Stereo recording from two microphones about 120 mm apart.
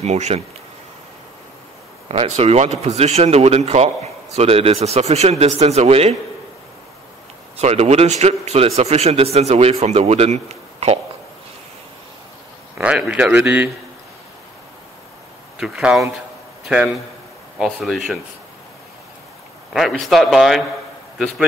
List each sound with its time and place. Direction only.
0.0 s speech: 65° right (ahead or behind)
2.0 s speech: 60° right (ahead or behind)
7.5 s speech: 65° right (ahead or behind)
12.7 s speech: 10° right (ahead or behind)
15.5 s a man's voice: 5° right (ahead or behind)
19.7 s a man's voice: centre (ahead or behind)